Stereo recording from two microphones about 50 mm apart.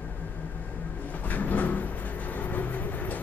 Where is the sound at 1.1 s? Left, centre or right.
Left.